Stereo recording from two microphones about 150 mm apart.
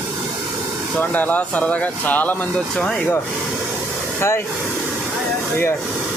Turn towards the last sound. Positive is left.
turn(degrees=15)  # may be behind; listen again after turning